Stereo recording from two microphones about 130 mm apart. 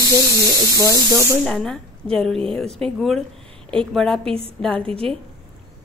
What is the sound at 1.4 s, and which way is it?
A woman's voice, 5° left (ahead or behind).